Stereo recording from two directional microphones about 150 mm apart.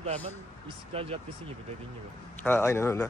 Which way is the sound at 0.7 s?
40° right (ahead or behind).